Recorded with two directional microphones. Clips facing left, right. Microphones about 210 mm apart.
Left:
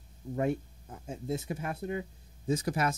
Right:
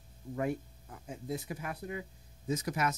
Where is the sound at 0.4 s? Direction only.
25° left (ahead or behind).